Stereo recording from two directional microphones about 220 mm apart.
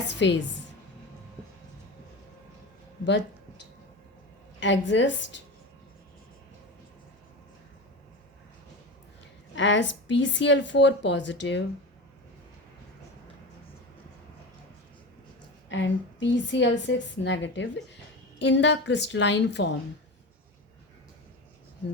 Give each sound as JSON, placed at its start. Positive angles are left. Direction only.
{"t": 0.1, "sound": "a woman's voice", "side_deg": 55}
{"t": 3.0, "sound": "a woman's voice", "side_deg": 55}
{"t": 4.6, "sound": "a woman's voice", "side_deg": 55}
{"t": 9.6, "sound": "a woman's voice", "side_deg": 55}
{"t": 15.7, "sound": "a woman's voice", "side_deg": 55}